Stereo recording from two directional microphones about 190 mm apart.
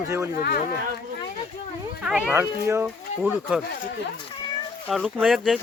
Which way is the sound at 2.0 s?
5° right (ahead or behind).